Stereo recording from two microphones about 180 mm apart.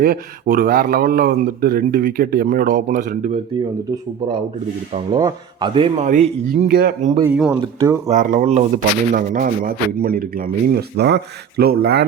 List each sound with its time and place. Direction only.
0.0 s speech: 55° right (ahead or behind)
5.1 s a man's voice: 25° right (ahead or behind)
6.1 s speech: 40° right (ahead or behind)
6.7 s speech: 60° right (ahead or behind)
7.3 s speech: 5° right (ahead or behind)
8.0 s speech: 45° right (ahead or behind); by 12.0 s 60° right (ahead or behind)